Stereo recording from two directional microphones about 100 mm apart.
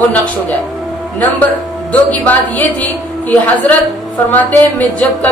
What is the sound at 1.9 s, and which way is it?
A woman's voice, 15° left (ahead or behind).